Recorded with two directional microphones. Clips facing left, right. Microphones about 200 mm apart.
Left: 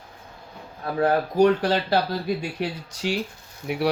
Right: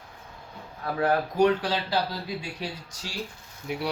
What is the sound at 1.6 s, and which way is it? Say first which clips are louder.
Speech: left 5 dB; 55° left (ahead or behind).